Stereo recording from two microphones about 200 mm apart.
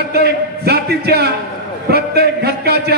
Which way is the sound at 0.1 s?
50° right (ahead or behind).